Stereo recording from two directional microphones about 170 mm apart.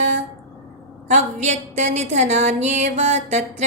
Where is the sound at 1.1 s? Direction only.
45° right (ahead or behind).